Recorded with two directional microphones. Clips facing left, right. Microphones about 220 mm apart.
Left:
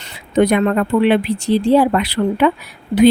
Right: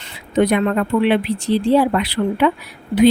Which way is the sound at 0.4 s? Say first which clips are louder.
Left 2 dB; 45° left (ahead or behind).